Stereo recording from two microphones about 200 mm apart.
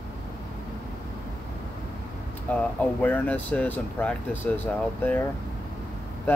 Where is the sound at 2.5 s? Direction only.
10° left (ahead or behind).